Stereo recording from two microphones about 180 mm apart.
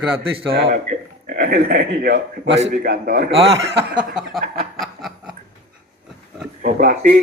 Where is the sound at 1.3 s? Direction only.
50° right (ahead or behind); by 2.5 s 65° right (ahead or behind).